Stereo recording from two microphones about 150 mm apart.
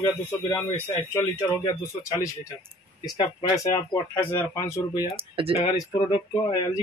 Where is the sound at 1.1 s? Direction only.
15° left (ahead or behind).